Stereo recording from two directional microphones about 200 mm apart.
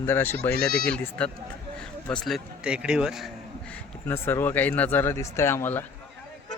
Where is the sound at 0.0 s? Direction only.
10° left (ahead or behind).